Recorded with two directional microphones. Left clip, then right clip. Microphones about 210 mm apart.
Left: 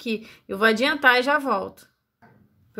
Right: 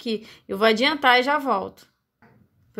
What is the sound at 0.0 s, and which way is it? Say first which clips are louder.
A woman's voice: right 1 dB; 10° right (ahead or behind).